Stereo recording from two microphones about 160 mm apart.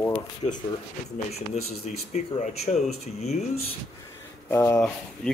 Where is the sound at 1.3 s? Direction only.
40° left (ahead or behind).